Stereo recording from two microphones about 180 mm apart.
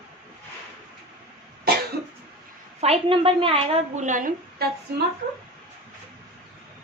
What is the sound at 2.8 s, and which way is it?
A woman's voice, 35° right (ahead or behind).